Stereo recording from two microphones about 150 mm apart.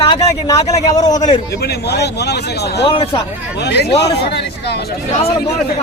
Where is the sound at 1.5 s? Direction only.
90° left.